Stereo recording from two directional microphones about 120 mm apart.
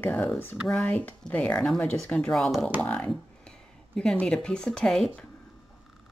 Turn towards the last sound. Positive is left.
turn(degrees=5)  # may be behind; listen again after turning